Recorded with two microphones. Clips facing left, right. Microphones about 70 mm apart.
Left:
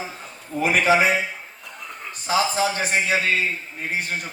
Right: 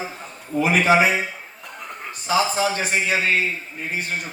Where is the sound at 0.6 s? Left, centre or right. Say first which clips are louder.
Right 1 dB; right.